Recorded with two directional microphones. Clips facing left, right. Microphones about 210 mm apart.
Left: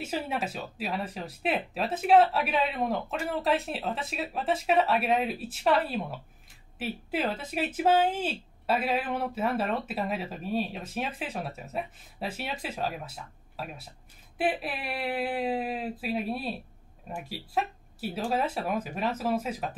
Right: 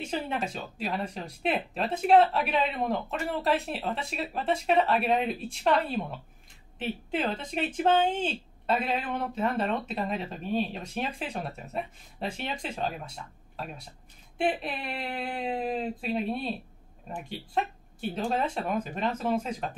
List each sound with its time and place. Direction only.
0.0 s speech: 5° left (ahead or behind)